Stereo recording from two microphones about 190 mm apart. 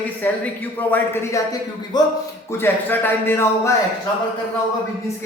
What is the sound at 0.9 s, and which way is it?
A man's voice, 20° left (ahead or behind).